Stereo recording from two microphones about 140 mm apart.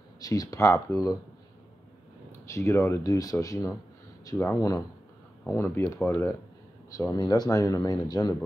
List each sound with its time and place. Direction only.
0.2 s speech: 25° left (ahead or behind)
2.4 s speech: 20° left (ahead or behind)